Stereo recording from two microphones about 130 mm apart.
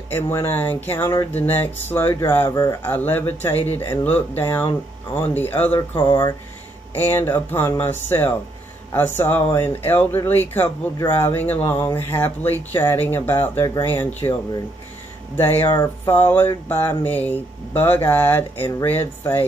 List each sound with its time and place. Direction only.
0.1 s speech: 20° left (ahead or behind)
2.8 s speech: 15° left (ahead or behind)
7.0 s speech: 15° left (ahead or behind)
14.2 s speech: 35° left (ahead or behind)
15.3 s speech: 15° left (ahead or behind)